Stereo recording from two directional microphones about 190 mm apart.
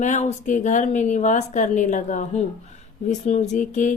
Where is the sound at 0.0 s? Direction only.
40° left (ahead or behind).